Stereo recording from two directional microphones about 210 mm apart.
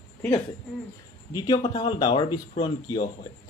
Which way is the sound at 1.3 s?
20° left (ahead or behind).